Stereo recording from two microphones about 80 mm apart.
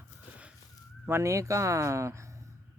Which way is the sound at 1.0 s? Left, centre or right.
Right.